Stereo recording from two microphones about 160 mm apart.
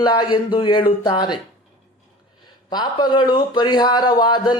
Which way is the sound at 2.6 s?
25° left (ahead or behind).